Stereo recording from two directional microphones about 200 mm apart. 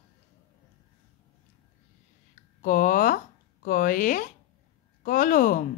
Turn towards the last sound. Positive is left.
turn(degrees=45)  # may be behind; listen again after turning